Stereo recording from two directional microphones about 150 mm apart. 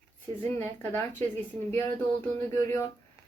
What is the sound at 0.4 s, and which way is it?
Speech, 15° left (ahead or behind).